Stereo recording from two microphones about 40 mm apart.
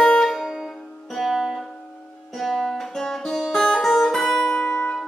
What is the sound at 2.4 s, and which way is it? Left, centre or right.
Music, centre.